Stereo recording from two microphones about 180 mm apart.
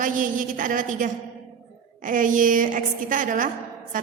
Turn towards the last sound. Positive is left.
turn(degrees=-45)  # may be behind; listen again after turning